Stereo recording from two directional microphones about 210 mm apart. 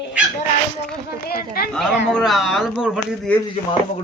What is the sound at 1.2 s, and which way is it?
Speech, 45° left (ahead or behind).